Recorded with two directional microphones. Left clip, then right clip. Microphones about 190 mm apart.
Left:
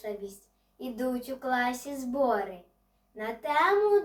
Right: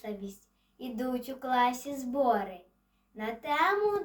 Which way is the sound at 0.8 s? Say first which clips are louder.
Left 2 dB; 10° left (ahead or behind).